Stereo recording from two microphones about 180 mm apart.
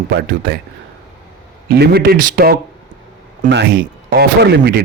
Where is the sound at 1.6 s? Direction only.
60° right (ahead or behind).